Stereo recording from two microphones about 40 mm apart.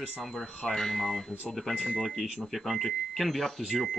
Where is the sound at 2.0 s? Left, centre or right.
Centre.